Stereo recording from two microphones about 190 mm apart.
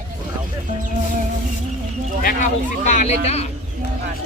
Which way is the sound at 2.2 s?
45° left (ahead or behind).